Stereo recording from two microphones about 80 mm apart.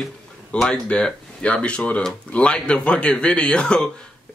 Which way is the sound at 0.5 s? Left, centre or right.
Centre.